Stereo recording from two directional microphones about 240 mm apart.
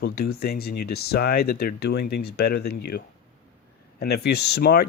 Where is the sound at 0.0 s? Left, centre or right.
Left.